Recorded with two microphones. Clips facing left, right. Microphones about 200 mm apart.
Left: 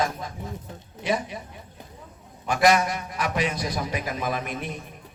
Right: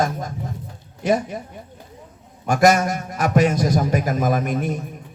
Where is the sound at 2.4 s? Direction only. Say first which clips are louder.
Right 4 dB; 45° right (ahead or behind).